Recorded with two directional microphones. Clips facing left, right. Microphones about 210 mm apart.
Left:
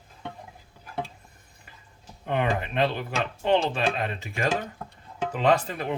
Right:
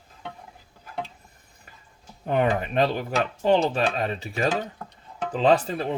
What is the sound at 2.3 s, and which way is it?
Speech, 40° right (ahead or behind).